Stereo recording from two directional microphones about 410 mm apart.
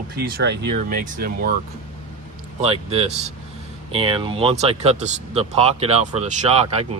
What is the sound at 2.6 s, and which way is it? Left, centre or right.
Speech, centre.